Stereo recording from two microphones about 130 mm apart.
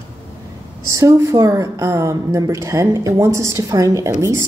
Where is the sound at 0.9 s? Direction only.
25° right (ahead or behind).